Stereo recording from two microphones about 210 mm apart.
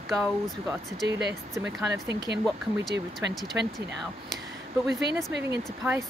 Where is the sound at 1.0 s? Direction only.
55° right (ahead or behind).